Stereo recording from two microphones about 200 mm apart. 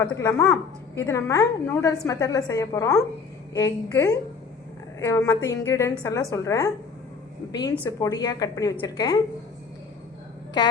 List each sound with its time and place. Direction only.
0.0 s a woman's voice: 15° left (ahead or behind)
7.9 s a woman's voice: 15° left (ahead or behind)